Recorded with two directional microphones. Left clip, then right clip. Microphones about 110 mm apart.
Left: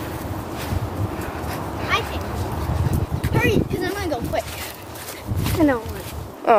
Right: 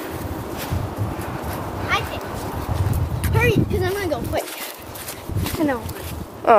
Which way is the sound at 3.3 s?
20° left (ahead or behind).